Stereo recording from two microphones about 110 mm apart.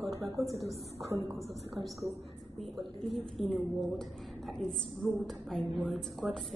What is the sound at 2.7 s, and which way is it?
A woman's voice, centre (ahead or behind).